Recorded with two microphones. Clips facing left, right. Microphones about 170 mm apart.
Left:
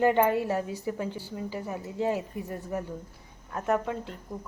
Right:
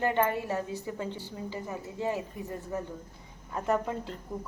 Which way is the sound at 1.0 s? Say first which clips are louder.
Left 2 dB; 20° right (ahead or behind).